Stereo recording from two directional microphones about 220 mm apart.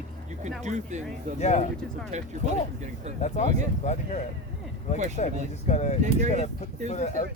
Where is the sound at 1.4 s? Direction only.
30° left (ahead or behind).